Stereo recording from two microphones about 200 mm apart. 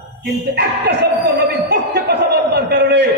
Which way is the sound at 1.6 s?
55° right (ahead or behind).